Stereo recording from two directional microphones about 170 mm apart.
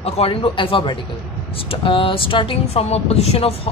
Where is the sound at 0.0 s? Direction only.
35° left (ahead or behind).